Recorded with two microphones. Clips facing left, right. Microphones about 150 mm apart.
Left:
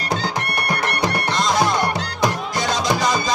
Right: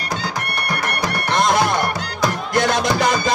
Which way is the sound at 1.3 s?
60° right (ahead or behind).